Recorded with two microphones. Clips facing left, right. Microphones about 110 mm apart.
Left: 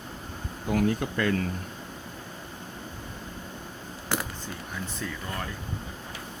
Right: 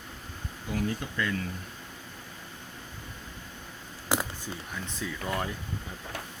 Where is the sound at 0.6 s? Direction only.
60° left (ahead or behind).